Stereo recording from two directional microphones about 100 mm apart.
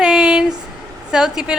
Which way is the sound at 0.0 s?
5° right (ahead or behind).